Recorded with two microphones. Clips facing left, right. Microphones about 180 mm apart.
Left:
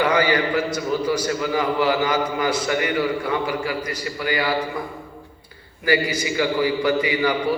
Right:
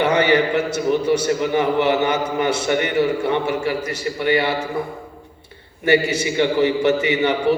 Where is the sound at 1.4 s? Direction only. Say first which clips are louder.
Right 3 dB; 20° right (ahead or behind).